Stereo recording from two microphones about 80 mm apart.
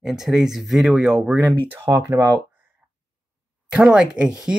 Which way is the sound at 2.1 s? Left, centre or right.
Right.